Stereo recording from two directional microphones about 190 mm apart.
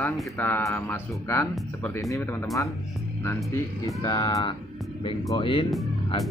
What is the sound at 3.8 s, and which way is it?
Speech, 20° left (ahead or behind).